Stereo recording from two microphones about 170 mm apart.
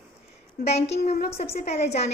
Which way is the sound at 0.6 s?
40° left (ahead or behind).